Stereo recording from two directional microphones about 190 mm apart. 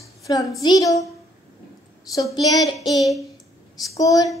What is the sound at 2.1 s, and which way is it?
Speech, 20° left (ahead or behind).